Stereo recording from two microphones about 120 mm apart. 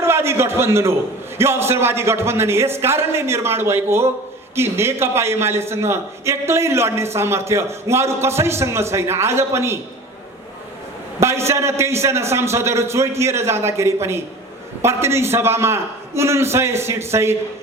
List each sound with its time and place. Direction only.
0.0 s a sound: 20° right (ahead or behind)
1.4 s a man's voice: 20° right (ahead or behind)
11.2 s a man's voice: 20° right (ahead or behind)